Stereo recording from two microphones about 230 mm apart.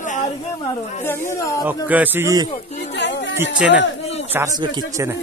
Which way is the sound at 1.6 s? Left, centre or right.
Centre.